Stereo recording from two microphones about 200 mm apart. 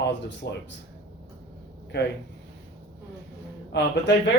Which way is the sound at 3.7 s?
60° left (ahead or behind).